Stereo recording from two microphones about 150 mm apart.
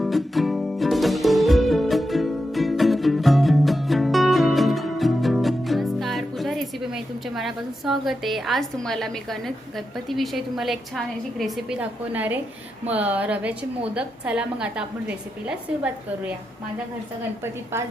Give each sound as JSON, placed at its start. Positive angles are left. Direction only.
{"t": 0.0, "sound": "music", "side_deg": 0}
{"t": 12.9, "sound": "a woman's voice", "side_deg": -10}
{"t": 17.4, "sound": "a woman's voice", "side_deg": -15}